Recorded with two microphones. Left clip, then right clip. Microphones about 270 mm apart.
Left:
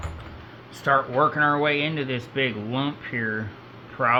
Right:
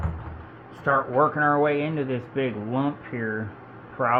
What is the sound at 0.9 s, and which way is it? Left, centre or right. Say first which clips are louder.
A man's voice: left 1 dB; centre.